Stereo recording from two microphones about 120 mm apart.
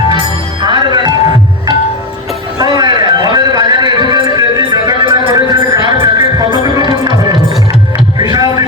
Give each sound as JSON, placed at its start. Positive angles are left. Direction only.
{"t": 0.6, "sound": "music", "side_deg": -40}
{"t": 2.6, "sound": "music", "side_deg": -35}